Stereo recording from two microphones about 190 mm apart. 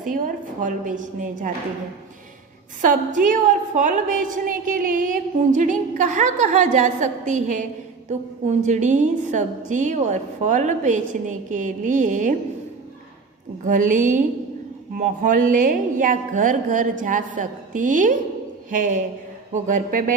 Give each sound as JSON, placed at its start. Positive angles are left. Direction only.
{"t": 0.6, "sound": "a woman's voice", "side_deg": -45}
{"t": 2.8, "sound": "a woman's voice", "side_deg": -45}
{"t": 13.7, "sound": "a woman's voice", "side_deg": -45}